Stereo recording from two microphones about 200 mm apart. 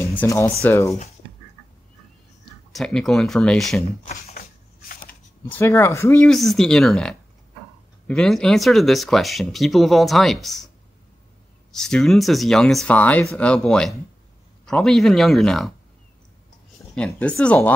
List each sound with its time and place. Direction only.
0.0 s speech: 10° left (ahead or behind)
2.7 s speech: centre (ahead or behind)
4.3 s a sound: 45° left (ahead or behind)
5.5 s speech: 10° left (ahead or behind)
11.7 s speech: centre (ahead or behind)
16.9 s speech: 5° left (ahead or behind)